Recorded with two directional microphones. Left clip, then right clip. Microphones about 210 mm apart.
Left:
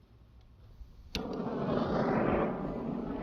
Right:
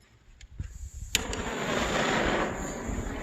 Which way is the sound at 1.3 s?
20° right (ahead or behind).